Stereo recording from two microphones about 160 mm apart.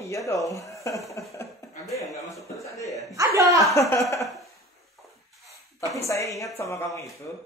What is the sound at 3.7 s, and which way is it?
Speech, 20° left (ahead or behind).